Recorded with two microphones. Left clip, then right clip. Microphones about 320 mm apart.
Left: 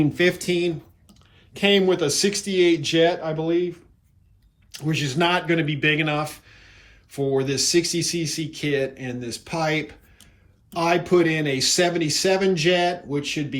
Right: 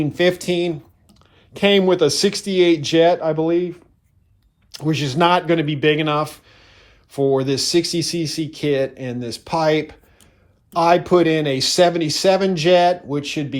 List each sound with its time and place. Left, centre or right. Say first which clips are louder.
0.0 s speech: right 3 dB; centre
4.7 s speech: right 4 dB; centre